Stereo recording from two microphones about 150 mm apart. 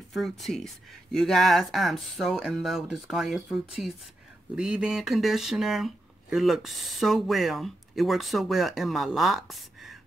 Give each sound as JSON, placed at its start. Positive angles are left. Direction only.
{"t": 0.1, "sound": "speech", "side_deg": 0}